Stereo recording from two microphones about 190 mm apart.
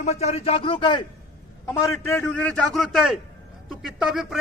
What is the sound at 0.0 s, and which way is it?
Speech, 35° left (ahead or behind).